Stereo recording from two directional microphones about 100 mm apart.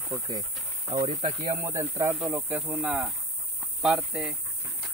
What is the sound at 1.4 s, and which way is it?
Speech, 30° right (ahead or behind).